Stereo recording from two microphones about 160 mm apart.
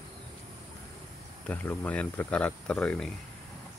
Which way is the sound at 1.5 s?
10° left (ahead or behind).